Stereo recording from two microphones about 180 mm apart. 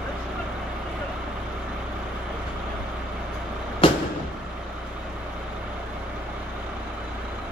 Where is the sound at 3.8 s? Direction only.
25° left (ahead or behind).